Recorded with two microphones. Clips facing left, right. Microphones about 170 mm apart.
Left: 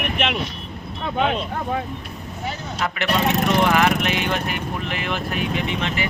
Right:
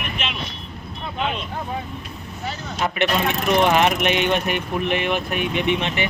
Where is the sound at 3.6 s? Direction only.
20° right (ahead or behind).